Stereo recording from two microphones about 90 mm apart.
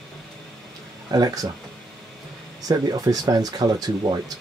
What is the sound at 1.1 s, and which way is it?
Speech, 45° right (ahead or behind).